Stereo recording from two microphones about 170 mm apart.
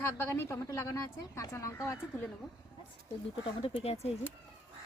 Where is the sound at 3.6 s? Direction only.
35° left (ahead or behind).